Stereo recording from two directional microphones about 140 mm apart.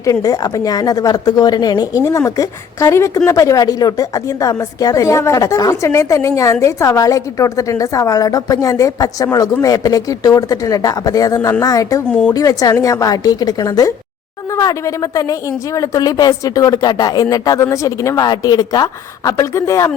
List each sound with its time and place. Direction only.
0.0 s speech: 25° left (ahead or behind)
12.0 s speech: 5° left (ahead or behind)
12.3 s speech: 25° left (ahead or behind)